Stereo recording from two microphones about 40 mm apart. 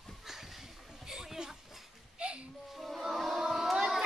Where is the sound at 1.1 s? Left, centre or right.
Centre.